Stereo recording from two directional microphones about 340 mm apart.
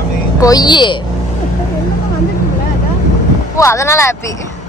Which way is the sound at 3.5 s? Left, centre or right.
Centre.